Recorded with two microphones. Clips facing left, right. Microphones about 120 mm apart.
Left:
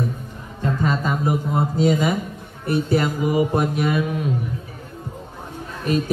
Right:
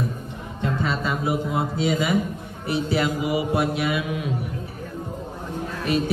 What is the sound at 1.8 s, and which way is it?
Mantra, 45° left (ahead or behind).